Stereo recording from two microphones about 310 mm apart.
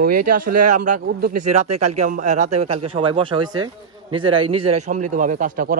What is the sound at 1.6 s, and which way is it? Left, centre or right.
Speech, right.